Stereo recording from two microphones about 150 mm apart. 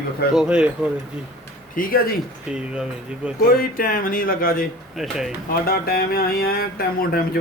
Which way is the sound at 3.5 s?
70° left (ahead or behind).